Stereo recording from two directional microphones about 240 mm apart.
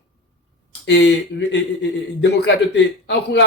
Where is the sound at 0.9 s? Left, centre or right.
Left.